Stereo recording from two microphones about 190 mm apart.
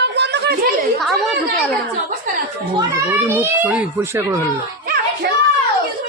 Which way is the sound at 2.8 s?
10° right (ahead or behind).